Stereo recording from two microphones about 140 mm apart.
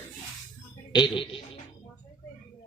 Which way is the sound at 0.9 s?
35° left (ahead or behind).